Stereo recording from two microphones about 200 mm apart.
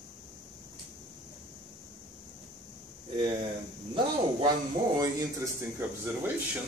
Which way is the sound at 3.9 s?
20° right (ahead or behind).